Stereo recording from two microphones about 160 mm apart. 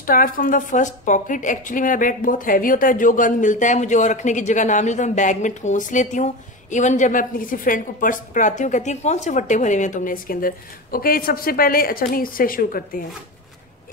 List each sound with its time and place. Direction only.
0.0 s a woman's voice: 60° left (ahead or behind)